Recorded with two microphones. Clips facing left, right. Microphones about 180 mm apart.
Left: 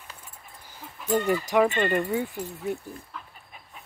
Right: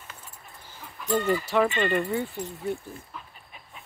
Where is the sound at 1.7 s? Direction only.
45° left (ahead or behind).